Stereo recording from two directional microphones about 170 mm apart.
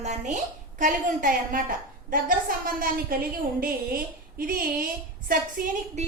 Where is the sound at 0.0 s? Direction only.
40° right (ahead or behind).